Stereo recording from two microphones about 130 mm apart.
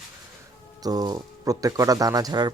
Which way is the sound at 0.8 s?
30° right (ahead or behind).